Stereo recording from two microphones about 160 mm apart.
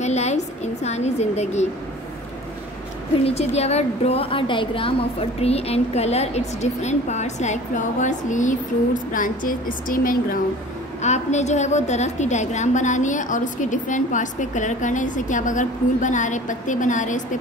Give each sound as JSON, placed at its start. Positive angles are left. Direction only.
{"t": 0.0, "sound": "a sound", "side_deg": 45}
{"t": 3.3, "sound": "a woman's voice", "side_deg": 40}
{"t": 11.0, "sound": "a woman's voice", "side_deg": 45}